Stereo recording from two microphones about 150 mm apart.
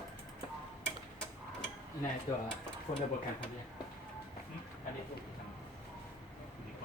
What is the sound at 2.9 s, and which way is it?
Speech, 40° left (ahead or behind).